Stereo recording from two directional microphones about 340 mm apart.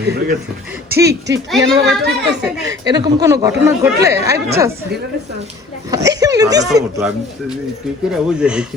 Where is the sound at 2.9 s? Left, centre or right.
Centre.